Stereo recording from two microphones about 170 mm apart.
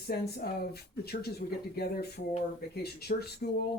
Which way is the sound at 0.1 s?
65° left (ahead or behind).